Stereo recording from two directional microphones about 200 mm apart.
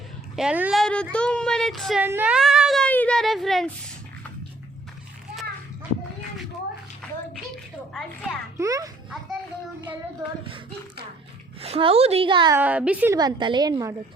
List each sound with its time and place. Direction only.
0.3 s speech: 5° right (ahead or behind)
2.0 s a sound: 10° right (ahead or behind)
7.0 s bathtub: 5° left (ahead or behind)
7.9 s music: 5° left (ahead or behind)
8.5 s a woman's voice: 15° right (ahead or behind)
11.6 s a woman's voice: 30° right (ahead or behind)
12.5 s a woman's voice: 5° right (ahead or behind)
13.1 s a woman's voice: 20° right (ahead or behind)